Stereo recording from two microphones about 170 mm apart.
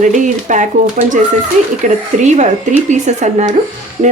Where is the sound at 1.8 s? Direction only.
45° right (ahead or behind).